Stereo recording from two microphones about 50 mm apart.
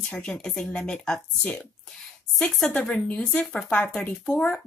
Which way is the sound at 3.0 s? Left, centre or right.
Left.